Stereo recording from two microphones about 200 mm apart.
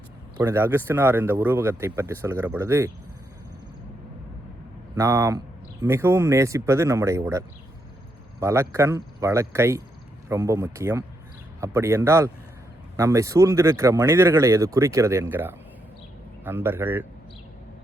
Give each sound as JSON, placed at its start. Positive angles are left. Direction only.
{"t": 0.3, "sound": "speech", "side_deg": -10}
{"t": 4.9, "sound": "speech", "side_deg": -15}